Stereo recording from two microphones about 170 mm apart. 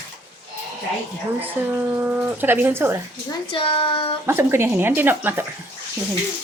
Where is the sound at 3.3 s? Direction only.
30° left (ahead or behind).